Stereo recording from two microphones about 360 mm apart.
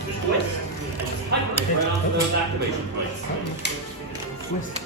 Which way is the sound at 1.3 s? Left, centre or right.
Right.